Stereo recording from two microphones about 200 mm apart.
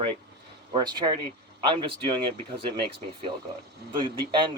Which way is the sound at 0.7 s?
20° right (ahead or behind).